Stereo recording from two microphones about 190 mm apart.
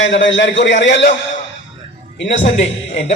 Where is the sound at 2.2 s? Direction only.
70° left (ahead or behind).